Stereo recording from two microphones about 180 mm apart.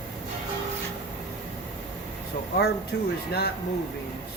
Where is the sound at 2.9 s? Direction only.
65° left (ahead or behind).